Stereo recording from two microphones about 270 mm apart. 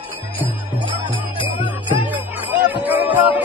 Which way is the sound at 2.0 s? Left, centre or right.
Centre.